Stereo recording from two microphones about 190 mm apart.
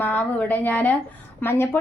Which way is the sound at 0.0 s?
10° left (ahead or behind).